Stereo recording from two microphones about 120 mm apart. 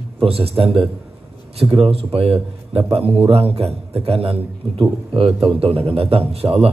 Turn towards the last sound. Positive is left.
turn(degrees=-55)  # may be behind; listen again after turning